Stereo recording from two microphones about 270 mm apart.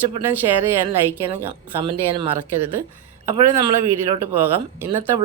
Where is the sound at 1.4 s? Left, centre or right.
Centre.